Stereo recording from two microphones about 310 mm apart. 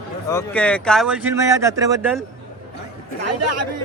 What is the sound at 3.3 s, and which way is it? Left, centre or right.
Speech, right.